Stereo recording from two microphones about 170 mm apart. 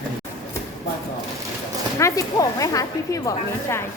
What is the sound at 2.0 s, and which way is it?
Speech, 20° left (ahead or behind).